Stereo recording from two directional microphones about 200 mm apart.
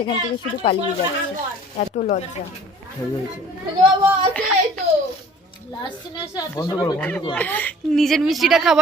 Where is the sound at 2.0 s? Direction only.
35° left (ahead or behind).